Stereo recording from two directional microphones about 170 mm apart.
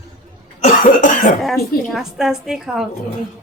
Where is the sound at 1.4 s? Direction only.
Centre (ahead or behind).